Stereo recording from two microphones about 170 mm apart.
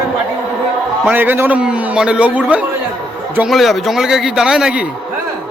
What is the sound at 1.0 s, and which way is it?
A man's voice, 10° right (ahead or behind).